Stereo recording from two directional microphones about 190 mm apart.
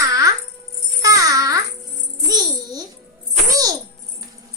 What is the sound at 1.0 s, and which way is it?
Babbling, 20° right (ahead or behind).